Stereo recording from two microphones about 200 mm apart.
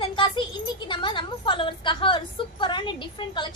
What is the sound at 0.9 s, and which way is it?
A woman's voice, 25° left (ahead or behind).